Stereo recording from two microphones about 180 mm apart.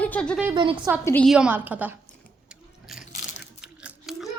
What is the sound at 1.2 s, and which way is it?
Speech, 5° right (ahead or behind).